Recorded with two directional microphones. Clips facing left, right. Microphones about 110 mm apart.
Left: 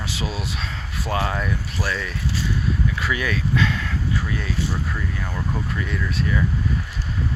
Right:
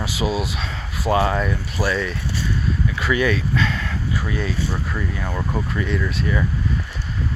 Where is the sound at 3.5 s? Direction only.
10° left (ahead or behind).